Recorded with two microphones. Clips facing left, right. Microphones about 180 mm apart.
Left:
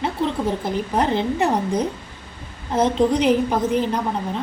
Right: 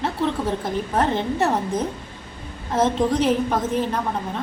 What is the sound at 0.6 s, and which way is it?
A woman's voice, 15° left (ahead or behind).